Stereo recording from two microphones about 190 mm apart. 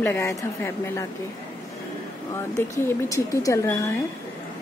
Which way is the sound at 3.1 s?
15° left (ahead or behind).